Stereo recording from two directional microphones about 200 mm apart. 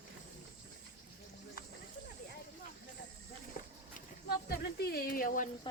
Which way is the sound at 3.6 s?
40° left (ahead or behind).